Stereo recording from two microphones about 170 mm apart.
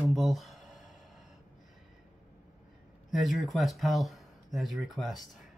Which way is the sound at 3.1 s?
Centre (ahead or behind).